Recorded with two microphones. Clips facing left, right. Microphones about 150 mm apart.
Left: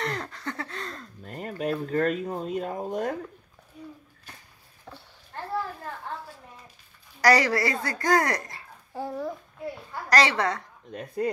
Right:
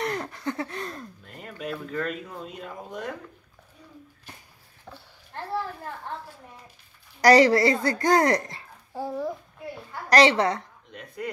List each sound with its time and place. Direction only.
0.0 s a sound: 15° right (ahead or behind)
1.2 s speech: 45° left (ahead or behind)
4.8 s a sound: centre (ahead or behind)
7.2 s a woman's voice: 25° right (ahead or behind)
8.9 s a child's voice: 10° right (ahead or behind)
10.0 s a woman's voice: 20° right (ahead or behind)
10.9 s speech: 35° left (ahead or behind)